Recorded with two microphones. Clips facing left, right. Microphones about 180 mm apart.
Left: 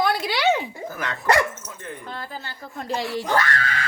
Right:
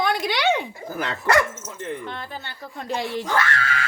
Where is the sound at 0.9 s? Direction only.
30° right (ahead or behind).